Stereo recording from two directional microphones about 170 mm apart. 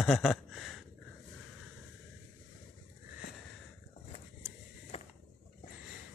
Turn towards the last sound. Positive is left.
turn(degrees=35)  # may be behind; listen again after turning